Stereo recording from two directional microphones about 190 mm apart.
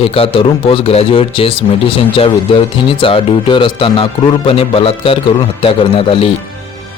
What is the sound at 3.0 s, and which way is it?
A man's voice, 25° left (ahead or behind).